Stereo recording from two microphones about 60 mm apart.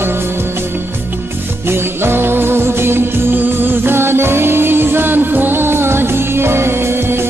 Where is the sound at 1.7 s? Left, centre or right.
Right.